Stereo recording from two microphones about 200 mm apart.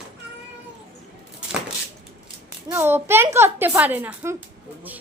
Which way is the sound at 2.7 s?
10° right (ahead or behind).